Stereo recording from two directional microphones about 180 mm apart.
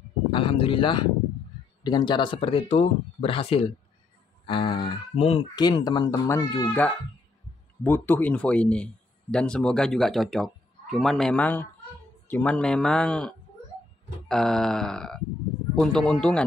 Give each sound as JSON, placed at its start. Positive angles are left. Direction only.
{"t": 0.3, "sound": "a man's voice", "side_deg": 30}